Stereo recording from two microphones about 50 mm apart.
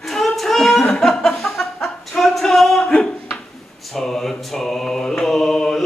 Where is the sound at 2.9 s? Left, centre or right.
Centre.